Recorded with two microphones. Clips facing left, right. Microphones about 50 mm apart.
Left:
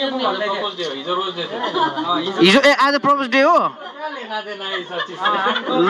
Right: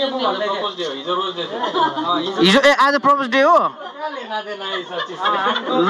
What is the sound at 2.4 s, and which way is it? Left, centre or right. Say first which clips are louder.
Speech: even; left.